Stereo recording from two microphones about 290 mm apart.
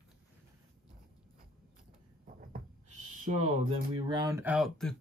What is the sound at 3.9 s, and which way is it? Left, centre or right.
Speech, centre.